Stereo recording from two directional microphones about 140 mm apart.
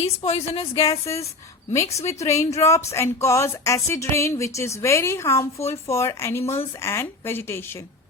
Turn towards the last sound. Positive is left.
turn(degrees=15)  # may be behind; listen again after turning